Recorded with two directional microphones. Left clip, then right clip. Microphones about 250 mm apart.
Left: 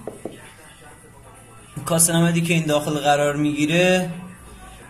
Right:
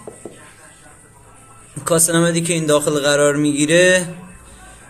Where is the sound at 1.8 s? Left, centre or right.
Right.